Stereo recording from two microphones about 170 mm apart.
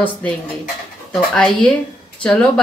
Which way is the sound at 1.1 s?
Centre (ahead or behind).